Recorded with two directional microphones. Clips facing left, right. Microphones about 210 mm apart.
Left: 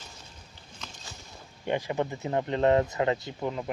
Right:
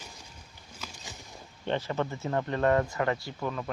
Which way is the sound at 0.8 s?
5° right (ahead or behind).